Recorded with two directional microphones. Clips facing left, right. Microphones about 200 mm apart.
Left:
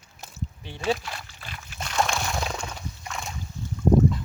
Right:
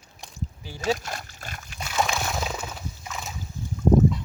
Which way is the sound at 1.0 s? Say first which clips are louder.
Right 3 dB; 45° right (ahead or behind).